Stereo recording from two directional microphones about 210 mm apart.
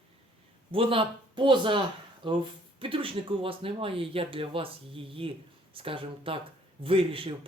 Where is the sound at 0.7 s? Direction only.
25° right (ahead or behind).